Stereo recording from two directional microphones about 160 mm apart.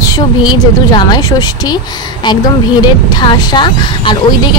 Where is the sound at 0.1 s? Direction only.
25° left (ahead or behind).